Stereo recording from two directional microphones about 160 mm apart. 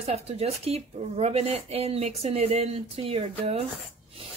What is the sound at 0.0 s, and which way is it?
Speech, 40° right (ahead or behind).